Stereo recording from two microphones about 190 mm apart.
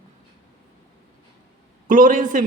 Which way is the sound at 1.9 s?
45° right (ahead or behind).